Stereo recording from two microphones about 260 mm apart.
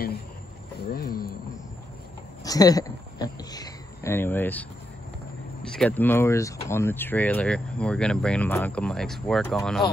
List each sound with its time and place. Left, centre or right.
0.8 s a sound: left
2.4 s speech: centre
5.8 s speech: centre